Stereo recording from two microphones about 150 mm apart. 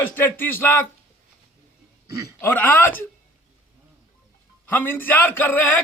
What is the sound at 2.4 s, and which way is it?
Speech, 10° left (ahead or behind).